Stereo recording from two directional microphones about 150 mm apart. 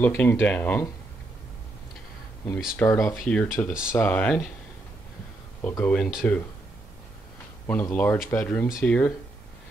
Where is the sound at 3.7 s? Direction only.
5° right (ahead or behind).